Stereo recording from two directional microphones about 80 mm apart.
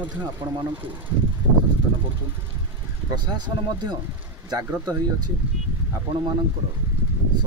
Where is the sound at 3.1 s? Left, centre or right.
Right.